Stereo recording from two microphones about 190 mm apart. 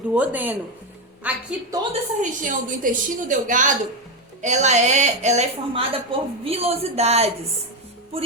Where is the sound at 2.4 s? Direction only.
45° right (ahead or behind).